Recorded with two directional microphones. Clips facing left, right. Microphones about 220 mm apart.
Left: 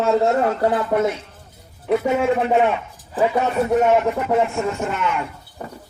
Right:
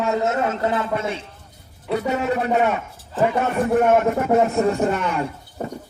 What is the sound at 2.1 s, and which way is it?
Speech, 40° right (ahead or behind).